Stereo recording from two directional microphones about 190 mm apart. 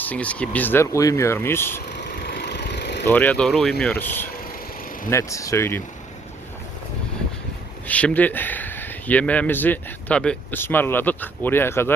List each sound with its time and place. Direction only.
0.0 s speech: 5° left (ahead or behind)
1.9 s vehicle: 60° left (ahead or behind)
3.1 s speech: 10° left (ahead or behind)
7.9 s speech: 5° left (ahead or behind)